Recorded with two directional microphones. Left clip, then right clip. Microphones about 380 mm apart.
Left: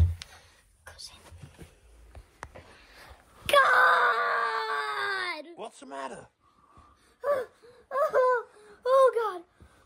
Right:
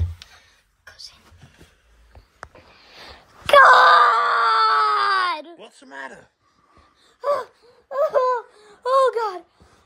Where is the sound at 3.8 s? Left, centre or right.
Right.